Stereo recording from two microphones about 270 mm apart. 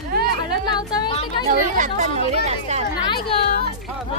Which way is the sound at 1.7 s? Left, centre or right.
Right.